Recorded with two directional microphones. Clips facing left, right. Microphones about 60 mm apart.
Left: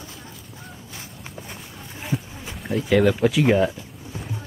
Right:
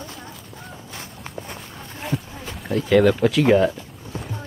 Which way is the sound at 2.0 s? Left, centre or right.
Centre.